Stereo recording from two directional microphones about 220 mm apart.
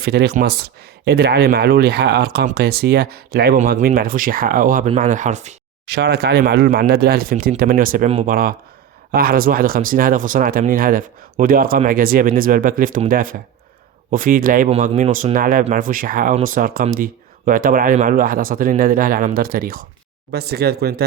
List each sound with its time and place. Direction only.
0.0 s speech: 45° right (ahead or behind); by 5.5 s 30° right (ahead or behind)
5.8 s speech: 45° right (ahead or behind)